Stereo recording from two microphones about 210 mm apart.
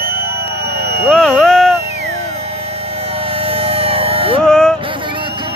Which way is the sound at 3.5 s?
30° right (ahead or behind).